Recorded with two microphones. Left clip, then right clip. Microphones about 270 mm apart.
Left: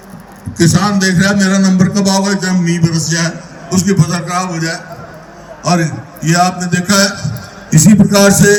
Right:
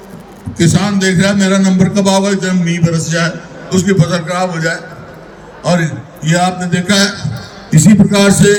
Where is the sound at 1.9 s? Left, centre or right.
Centre.